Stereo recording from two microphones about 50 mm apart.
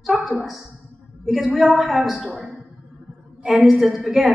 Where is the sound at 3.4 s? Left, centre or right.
Centre.